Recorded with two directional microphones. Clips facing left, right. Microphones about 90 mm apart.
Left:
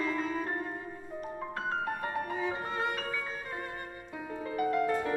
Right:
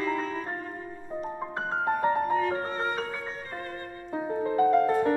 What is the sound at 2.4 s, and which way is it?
Music, 15° left (ahead or behind).